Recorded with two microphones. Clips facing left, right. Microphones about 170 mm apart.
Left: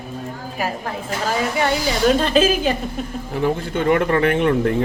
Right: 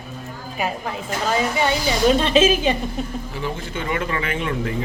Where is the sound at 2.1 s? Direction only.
Centre (ahead or behind).